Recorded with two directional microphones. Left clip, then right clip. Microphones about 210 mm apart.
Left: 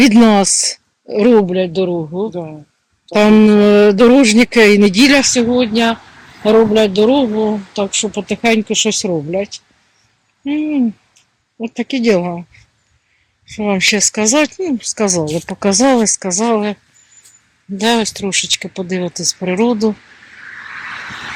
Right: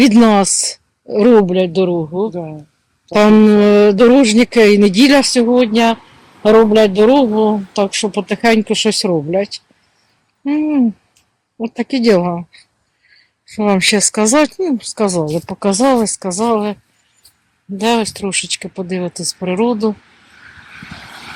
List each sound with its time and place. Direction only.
0.0 s speech: 5° right (ahead or behind)
1.1 s speech: 20° right (ahead or behind)
2.3 s speech: 40° right (ahead or behind)
3.1 s speech: 15° right (ahead or behind)
17.7 s speech: centre (ahead or behind)